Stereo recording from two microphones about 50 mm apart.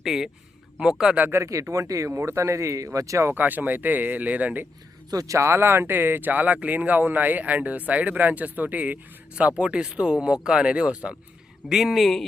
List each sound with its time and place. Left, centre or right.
0.0 s a man's voice: centre
1.3 s speech: right
3.3 s speech: right
5.3 s speech: right
11.7 s speech: centre